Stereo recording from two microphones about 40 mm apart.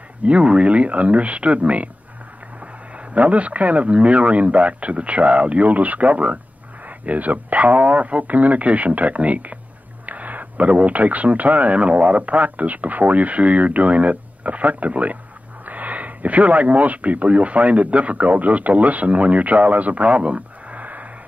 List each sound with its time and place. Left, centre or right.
0.2 s speech: right
3.2 s speech: right